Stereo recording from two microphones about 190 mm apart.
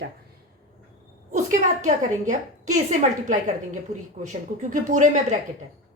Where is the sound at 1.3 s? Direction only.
40° right (ahead or behind).